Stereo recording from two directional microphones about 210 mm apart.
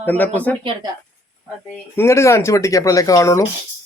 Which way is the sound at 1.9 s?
10° left (ahead or behind).